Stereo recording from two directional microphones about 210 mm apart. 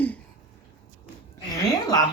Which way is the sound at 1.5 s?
15° left (ahead or behind).